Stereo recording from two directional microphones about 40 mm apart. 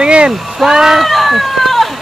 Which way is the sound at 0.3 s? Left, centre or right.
Centre.